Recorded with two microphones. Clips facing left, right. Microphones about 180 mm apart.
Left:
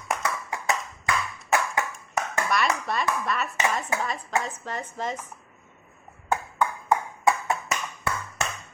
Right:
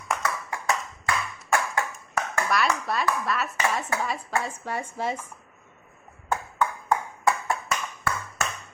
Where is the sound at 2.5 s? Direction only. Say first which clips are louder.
Right 1 dB; centre (ahead or behind).